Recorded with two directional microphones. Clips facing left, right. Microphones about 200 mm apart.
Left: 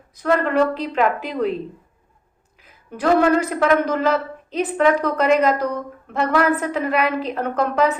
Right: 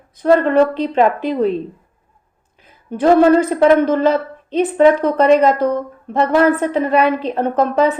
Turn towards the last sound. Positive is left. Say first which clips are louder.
# right 5 dB
turn(degrees=-30)  # may be behind; listen again after turning